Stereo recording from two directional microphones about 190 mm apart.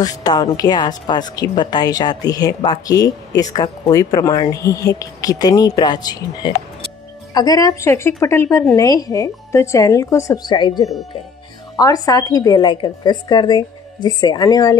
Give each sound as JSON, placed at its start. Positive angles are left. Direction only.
{"t": 0.0, "sound": "a woman's voice", "side_deg": 20}